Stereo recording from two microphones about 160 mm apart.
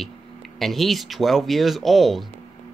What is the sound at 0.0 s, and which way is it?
Speech, centre (ahead or behind).